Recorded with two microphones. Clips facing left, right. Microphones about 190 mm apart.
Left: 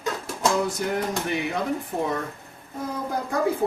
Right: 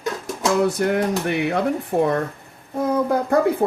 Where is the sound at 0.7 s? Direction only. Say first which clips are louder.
Right 6 dB; 65° right (ahead or behind).